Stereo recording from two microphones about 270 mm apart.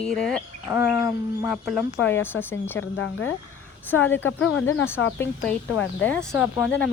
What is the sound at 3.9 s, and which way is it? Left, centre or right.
Speech, left.